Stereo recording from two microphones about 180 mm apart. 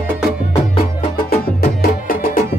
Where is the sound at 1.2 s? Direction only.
55° left (ahead or behind).